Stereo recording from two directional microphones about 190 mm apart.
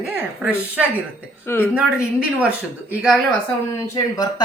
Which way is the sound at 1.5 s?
10° left (ahead or behind).